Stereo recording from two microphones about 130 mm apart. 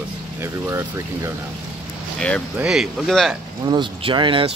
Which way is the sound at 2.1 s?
5° left (ahead or behind).